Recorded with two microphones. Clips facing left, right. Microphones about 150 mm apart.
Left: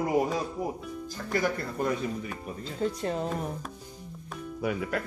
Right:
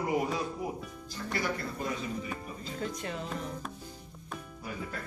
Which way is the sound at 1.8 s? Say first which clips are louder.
Left 9 dB; 55° left (ahead or behind).